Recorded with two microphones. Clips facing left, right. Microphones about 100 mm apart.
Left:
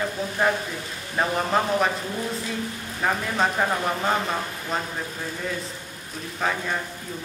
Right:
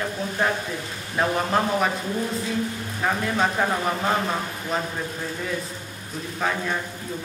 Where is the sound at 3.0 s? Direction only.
Centre (ahead or behind).